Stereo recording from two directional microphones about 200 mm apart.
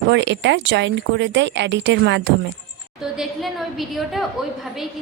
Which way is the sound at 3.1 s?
Centre (ahead or behind).